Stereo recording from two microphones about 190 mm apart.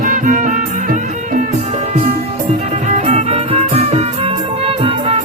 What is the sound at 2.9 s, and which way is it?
Music, 35° right (ahead or behind).